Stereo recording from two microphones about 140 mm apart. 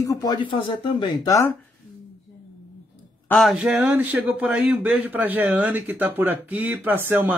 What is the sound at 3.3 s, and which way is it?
A woman's voice, centre (ahead or behind).